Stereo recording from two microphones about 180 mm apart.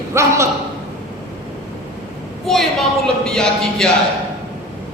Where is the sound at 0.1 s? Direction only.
15° right (ahead or behind).